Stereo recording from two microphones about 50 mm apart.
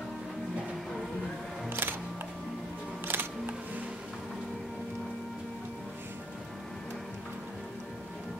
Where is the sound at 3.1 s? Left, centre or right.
Right.